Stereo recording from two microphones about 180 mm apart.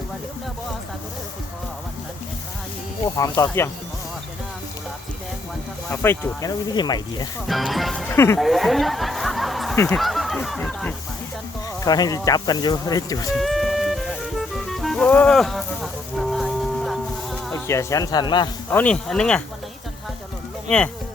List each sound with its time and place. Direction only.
3.2 s speech: 15° left (ahead or behind)
5.9 s speech: 15° left (ahead or behind)
7.4 s speech: centre (ahead or behind)
8.1 s speech: 15° left (ahead or behind)
8.4 s speech: centre (ahead or behind)
9.7 s speech: 15° left (ahead or behind)
10.0 s a sound: centre (ahead or behind)
11.8 s speech: 20° left (ahead or behind)
13.3 s music: centre (ahead or behind)
17.7 s speech: 15° left (ahead or behind)
18.7 s speech: 5° left (ahead or behind)
20.7 s speech: 5° left (ahead or behind)